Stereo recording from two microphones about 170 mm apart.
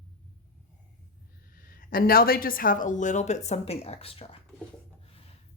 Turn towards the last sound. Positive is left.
turn(degrees=35)  # may be behind; listen again after turning